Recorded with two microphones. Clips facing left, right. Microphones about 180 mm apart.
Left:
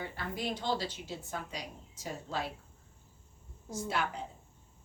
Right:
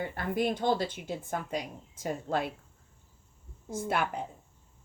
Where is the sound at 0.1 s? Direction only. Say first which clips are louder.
Right 7 dB; 55° right (ahead or behind).